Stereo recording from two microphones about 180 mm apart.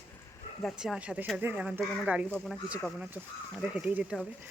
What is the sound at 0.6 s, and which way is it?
Speech, centre (ahead or behind).